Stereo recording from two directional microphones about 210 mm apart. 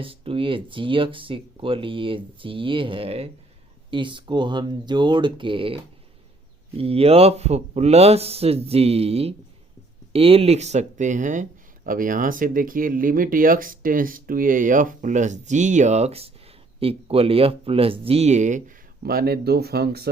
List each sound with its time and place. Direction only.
0.0 s speech: 25° right (ahead or behind)
19.0 s speech: 45° right (ahead or behind)